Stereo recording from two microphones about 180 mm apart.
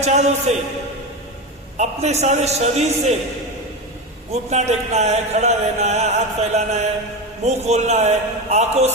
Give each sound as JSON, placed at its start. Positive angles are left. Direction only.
{"t": 0.0, "sound": "a man's voice", "side_deg": -40}
{"t": 1.8, "sound": "a man's voice", "side_deg": -40}
{"t": 4.3, "sound": "a man's voice", "side_deg": -40}